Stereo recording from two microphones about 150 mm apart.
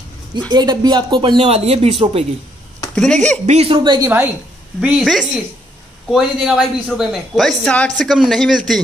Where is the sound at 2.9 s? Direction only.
5° left (ahead or behind).